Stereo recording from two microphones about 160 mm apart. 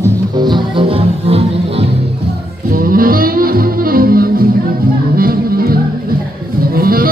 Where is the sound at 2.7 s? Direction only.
65° right (ahead or behind).